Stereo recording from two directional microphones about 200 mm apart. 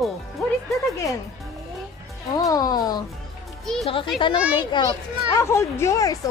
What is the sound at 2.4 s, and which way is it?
Speech, 20° left (ahead or behind).